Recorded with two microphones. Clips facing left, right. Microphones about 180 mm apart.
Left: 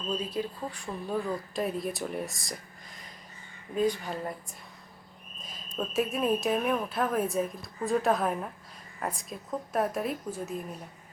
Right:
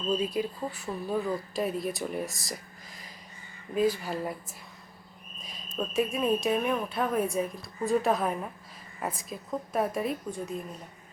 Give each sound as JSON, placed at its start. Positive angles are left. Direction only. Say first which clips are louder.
{"t": 0.1, "sound": "a woman's voice", "louder": "right 4 dB", "side_deg": -10}
{"t": 3.8, "sound": "a woman's voice", "louder": "right 1 dB", "side_deg": -5}
{"t": 5.4, "sound": "a sound", "louder": "even", "side_deg": 0}
{"t": 5.7, "sound": "a woman's voice", "louder": "right 1 dB", "side_deg": 0}